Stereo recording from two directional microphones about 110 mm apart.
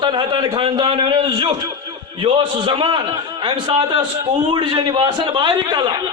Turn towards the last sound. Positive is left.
turn(degrees=-40)  # may be behind; listen again after turning